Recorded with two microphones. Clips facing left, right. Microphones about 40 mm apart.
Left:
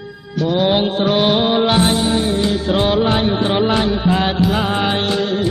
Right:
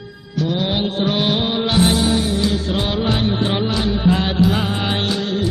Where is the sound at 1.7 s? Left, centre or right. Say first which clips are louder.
Left 1 dB; left.